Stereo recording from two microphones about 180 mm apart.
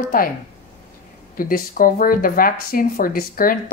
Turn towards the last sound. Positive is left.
turn(degrees=55)  # may be behind; listen again after turning